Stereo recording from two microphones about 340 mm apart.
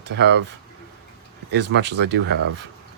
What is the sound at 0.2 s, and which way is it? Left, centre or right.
Speech, right.